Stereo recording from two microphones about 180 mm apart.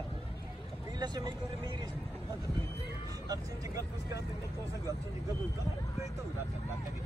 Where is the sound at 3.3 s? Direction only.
20° right (ahead or behind).